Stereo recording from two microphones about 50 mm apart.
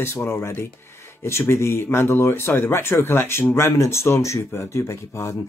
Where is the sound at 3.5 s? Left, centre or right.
Left.